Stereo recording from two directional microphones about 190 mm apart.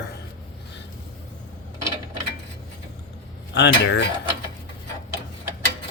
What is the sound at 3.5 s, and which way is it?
Speech, 65° left (ahead or behind).